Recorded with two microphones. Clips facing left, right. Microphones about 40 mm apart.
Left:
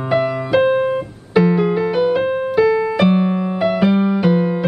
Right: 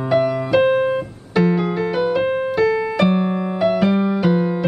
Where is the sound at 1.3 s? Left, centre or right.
Centre.